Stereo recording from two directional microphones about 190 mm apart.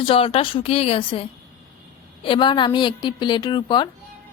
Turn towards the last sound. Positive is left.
turn(degrees=25)  # may be behind; listen again after turning